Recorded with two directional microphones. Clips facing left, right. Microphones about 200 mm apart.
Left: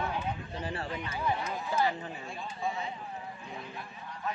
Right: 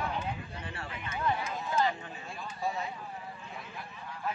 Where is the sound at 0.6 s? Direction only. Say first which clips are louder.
Left 6 dB; 35° left (ahead or behind).